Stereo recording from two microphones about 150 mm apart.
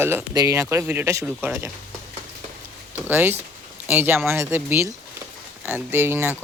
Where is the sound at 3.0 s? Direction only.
15° right (ahead or behind).